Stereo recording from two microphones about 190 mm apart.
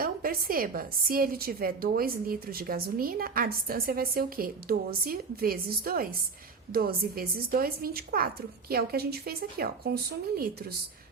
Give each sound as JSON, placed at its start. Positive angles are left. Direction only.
{"t": 0.0, "sound": "a woman's voice", "side_deg": -50}